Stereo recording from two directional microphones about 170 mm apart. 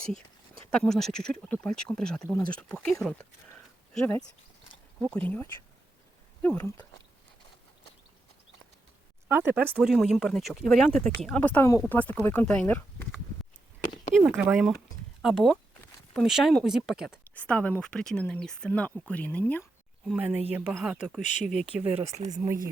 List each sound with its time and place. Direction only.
0.7 s speech: 5° left (ahead or behind)
9.3 s speech: 10° right (ahead or behind); by 13.1 s 10° left (ahead or behind)
14.2 s speech: 5° right (ahead or behind)
17.1 s speech: 10° left (ahead or behind)
20.1 s speech: 10° right (ahead or behind)
21.2 s speech: 45° left (ahead or behind)
21.7 s speech: 10° right (ahead or behind)
22.1 s speech: 20° right (ahead or behind)